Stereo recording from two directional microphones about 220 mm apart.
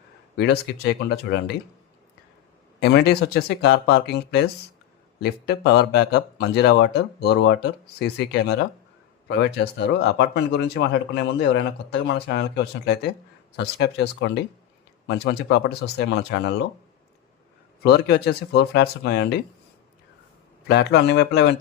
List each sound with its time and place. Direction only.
0.3 s speech: 50° left (ahead or behind)
2.8 s speech: 50° left (ahead or behind)
17.8 s speech: 50° left (ahead or behind)
20.7 s speech: 50° left (ahead or behind)